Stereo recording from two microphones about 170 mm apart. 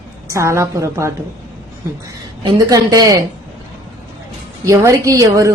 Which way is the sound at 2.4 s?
20° right (ahead or behind).